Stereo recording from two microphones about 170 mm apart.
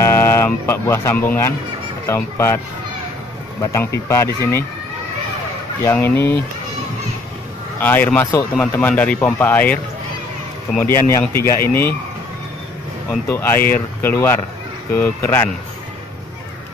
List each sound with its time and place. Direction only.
0.0 s a man's voice: 15° left (ahead or behind)
3.7 s a man's voice: 15° left (ahead or behind)
5.9 s a man's voice: 10° left (ahead or behind)
7.8 s a man's voice: 10° left (ahead or behind)
10.8 s a man's voice: 15° left (ahead or behind)
13.3 s a man's voice: 15° left (ahead or behind)